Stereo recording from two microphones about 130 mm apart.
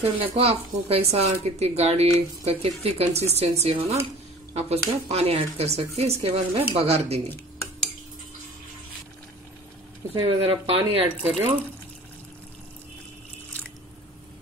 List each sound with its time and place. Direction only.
0.0 s speech: 50° right (ahead or behind)
10.1 s speech: 45° right (ahead or behind)